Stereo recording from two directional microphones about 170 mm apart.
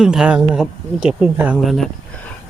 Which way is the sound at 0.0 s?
5° right (ahead or behind).